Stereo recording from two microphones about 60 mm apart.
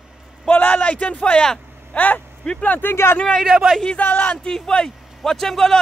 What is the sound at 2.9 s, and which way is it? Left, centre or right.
Speech, left.